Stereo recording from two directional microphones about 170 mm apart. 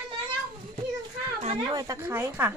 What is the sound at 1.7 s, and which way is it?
Speech, 20° right (ahead or behind).